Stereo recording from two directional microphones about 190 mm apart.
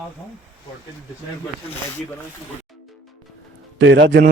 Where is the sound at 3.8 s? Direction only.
70° right (ahead or behind).